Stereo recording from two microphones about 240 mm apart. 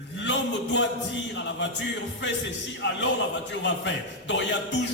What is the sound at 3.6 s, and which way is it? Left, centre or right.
Music, left.